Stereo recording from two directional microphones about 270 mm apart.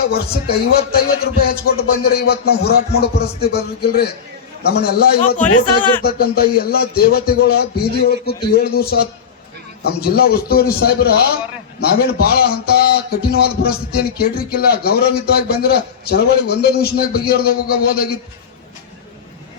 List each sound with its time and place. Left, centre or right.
0.0 s a man's voice: left